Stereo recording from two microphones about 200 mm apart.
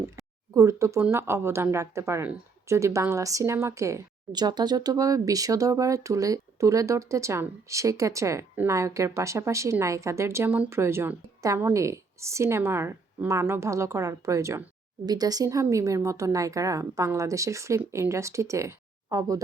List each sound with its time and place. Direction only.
0.5 s speech: 15° right (ahead or behind)